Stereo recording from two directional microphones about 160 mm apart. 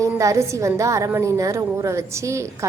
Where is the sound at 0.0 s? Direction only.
20° right (ahead or behind).